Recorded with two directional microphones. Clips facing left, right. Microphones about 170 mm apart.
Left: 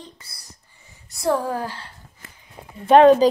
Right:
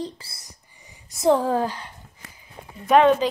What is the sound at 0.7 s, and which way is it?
Speech, 15° right (ahead or behind).